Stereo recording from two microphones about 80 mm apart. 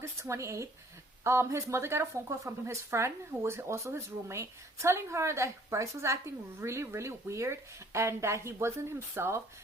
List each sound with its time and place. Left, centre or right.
0.0 s speech: right